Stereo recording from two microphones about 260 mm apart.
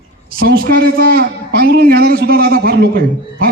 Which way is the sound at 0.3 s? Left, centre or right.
Right.